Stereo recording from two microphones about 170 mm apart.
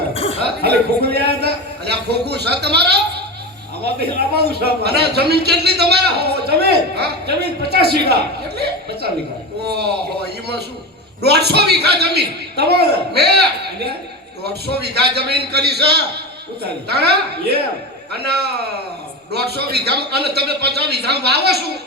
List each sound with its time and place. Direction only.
0.1 s cough: 35° left (ahead or behind)
0.6 s a man's voice: 70° right (ahead or behind)
4.4 s a man's voice: 70° right (ahead or behind)
11.2 s a man's voice: 75° right (ahead or behind)
14.4 s a man's voice: 70° right (ahead or behind)